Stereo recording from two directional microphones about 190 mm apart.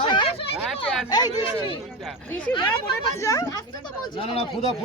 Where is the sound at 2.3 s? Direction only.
10° left (ahead or behind).